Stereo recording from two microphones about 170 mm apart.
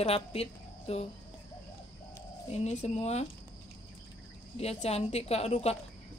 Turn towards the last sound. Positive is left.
turn(degrees=40)  # may be behind; listen again after turning